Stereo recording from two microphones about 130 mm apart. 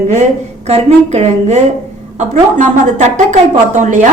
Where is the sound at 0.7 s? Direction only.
55° right (ahead or behind).